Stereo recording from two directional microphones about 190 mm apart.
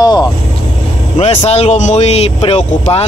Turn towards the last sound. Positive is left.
turn(degrees=35)  # may be behind; listen again after turning